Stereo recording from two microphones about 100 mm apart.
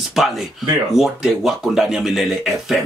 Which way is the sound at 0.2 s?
Centre (ahead or behind).